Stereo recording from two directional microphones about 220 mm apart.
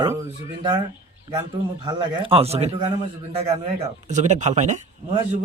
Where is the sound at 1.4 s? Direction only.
25° right (ahead or behind).